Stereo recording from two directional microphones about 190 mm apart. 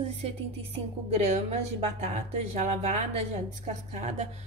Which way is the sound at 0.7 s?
35° right (ahead or behind).